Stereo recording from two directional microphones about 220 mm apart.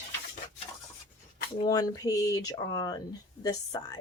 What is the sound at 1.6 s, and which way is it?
A woman's voice, 15° left (ahead or behind).